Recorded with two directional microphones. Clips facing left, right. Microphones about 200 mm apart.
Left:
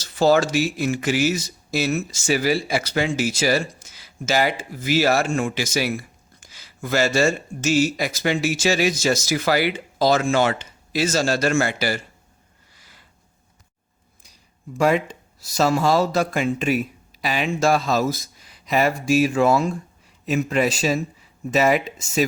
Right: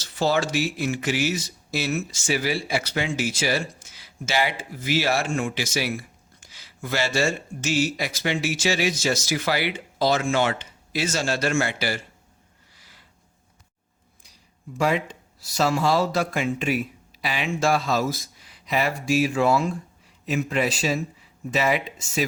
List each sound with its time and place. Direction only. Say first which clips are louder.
0.0 s speech: left 6 dB; 40° left (ahead or behind)
12.7 s a sound: left 2 dB; 50° left (ahead or behind)
14.7 s speech: left 4 dB; 45° left (ahead or behind)